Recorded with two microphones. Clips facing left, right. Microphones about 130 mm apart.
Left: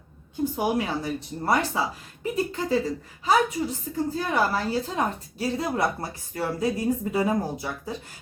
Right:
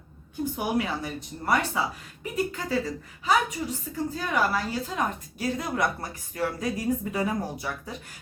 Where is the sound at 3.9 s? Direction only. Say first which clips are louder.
Left 2 dB; 35° left (ahead or behind).